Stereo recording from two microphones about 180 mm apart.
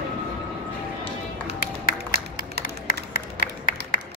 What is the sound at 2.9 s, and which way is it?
Music, 50° left (ahead or behind).